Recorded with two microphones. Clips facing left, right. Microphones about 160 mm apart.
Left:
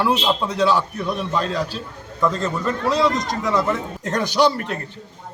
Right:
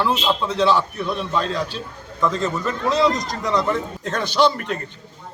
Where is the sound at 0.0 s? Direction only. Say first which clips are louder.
Left 1 dB; 10° left (ahead or behind).